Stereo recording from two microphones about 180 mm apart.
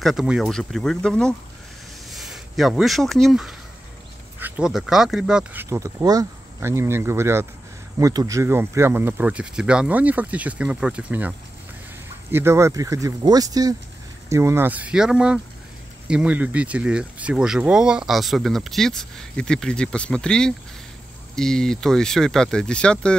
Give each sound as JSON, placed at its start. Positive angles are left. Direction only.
{"t": 0.0, "sound": "speech", "side_deg": 0}